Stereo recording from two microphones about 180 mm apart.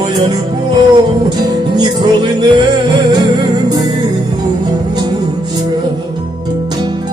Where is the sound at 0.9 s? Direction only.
25° right (ahead or behind).